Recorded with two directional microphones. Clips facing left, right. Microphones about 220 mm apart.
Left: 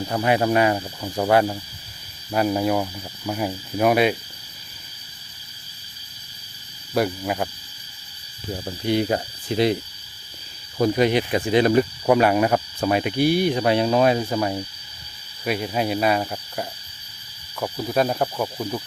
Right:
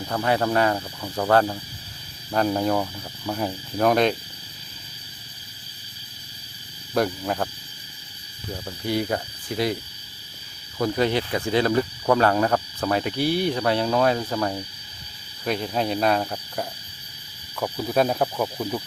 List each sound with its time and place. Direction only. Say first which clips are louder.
0.1 s cricket: left 2 dB; 15° left (ahead or behind)
6.9 s cricket: left 1 dB; 5° left (ahead or behind)
8.5 s speech: left 4 dB; 20° left (ahead or behind)
10.8 s cricket: left 4 dB; 20° left (ahead or behind)
17.6 s speech: even; centre (ahead or behind)